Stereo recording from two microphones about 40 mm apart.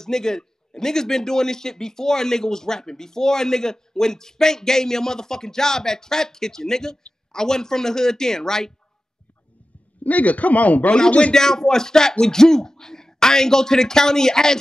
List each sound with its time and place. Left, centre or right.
0.0 s a man's voice: centre
10.0 s a man's voice: left
11.3 s a man's voice: centre